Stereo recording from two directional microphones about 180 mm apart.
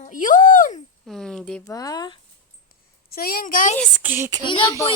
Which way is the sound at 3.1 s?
55° left (ahead or behind).